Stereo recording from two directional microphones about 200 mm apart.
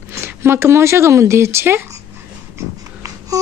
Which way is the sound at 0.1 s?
10° right (ahead or behind).